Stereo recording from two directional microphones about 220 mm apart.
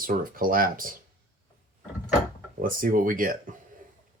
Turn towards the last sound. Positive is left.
turn(degrees=-40)  # may be behind; listen again after turning